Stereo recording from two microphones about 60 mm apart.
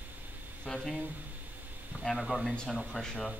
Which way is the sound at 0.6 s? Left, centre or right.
Centre.